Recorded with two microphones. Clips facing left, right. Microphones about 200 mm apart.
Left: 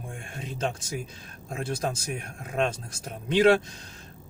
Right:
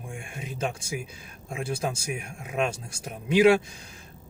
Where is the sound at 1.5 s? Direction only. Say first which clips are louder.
Even; 10° right (ahead or behind).